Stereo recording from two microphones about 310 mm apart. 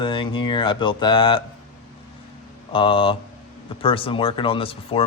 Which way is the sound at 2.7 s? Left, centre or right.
Centre.